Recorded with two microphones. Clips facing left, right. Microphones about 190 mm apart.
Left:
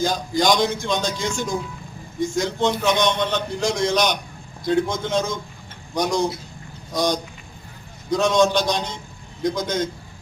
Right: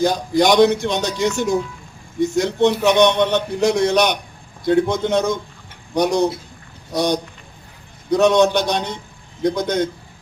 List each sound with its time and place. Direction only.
0.0 s a man's voice: 65° right (ahead or behind)